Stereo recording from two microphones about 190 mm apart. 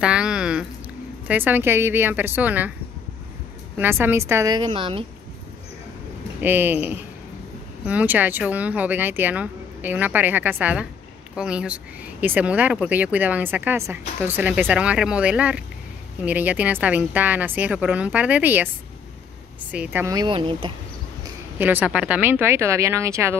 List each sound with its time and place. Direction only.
0.0 s a sound: 5° right (ahead or behind)
1.2 s speech: 10° right (ahead or behind)
3.7 s speech: 10° right (ahead or behind); by 5.0 s 25° right (ahead or behind)
6.4 s speech: 10° right (ahead or behind)
19.7 s speech: 10° right (ahead or behind); by 20.7 s 25° right (ahead or behind)
21.5 s speech: 10° right (ahead or behind)